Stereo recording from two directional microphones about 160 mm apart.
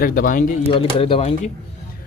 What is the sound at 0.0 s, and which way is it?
Speech, 60° left (ahead or behind).